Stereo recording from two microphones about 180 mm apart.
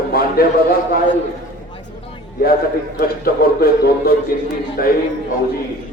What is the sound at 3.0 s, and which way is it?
A man's voice, 55° left (ahead or behind).